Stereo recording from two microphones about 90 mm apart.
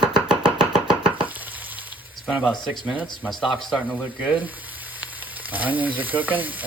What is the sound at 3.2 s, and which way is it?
Speech, 5° left (ahead or behind).